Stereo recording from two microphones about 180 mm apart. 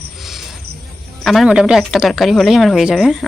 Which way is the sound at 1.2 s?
Centre (ahead or behind).